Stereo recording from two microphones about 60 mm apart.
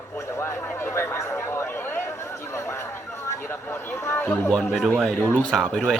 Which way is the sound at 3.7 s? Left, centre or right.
Left.